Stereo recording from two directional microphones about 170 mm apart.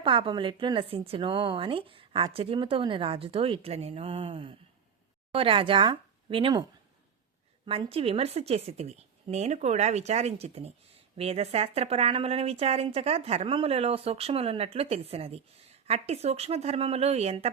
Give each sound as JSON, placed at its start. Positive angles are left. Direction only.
{"t": 0.0, "sound": "speech", "side_deg": -30}